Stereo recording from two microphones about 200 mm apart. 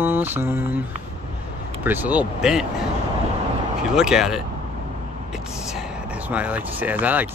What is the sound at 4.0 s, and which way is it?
Speech, 5° right (ahead or behind).